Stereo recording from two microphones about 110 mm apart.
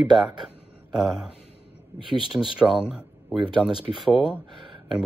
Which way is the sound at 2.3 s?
15° right (ahead or behind).